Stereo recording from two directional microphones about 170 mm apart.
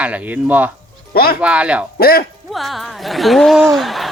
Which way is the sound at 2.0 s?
65° left (ahead or behind).